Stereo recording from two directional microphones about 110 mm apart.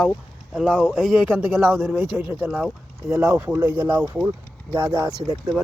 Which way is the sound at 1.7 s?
20° right (ahead or behind).